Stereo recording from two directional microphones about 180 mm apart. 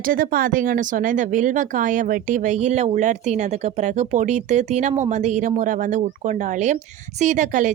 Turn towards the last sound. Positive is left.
turn(degrees=-45)  # may be behind; listen again after turning